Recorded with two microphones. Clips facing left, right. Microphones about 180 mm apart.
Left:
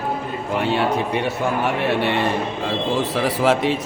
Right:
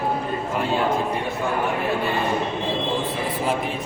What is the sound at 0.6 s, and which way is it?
Speech, 75° left (ahead or behind).